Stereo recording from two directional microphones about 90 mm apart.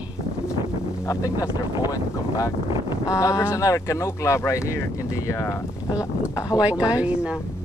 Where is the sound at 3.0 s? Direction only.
40° left (ahead or behind).